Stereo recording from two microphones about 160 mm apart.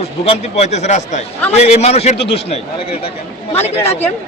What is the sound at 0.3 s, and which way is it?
A man's voice, 45° left (ahead or behind).